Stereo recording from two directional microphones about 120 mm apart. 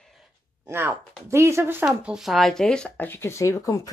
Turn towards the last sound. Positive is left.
turn(degrees=30)  # may be behind; listen again after turning